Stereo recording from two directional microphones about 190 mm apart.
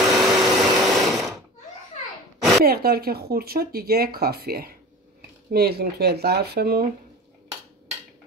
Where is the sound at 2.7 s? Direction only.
55° right (ahead or behind).